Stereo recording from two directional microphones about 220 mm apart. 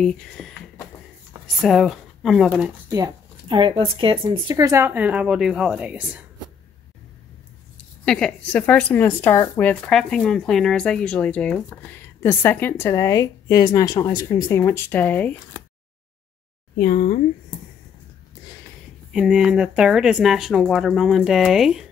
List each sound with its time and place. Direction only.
0.0 s speech: centre (ahead or behind)
1.6 s speech: centre (ahead or behind)
2.9 s speech: 20° right (ahead or behind)
8.0 s speech: 5° left (ahead or behind)
16.7 s speech: 40° left (ahead or behind)
19.1 s speech: centre (ahead or behind)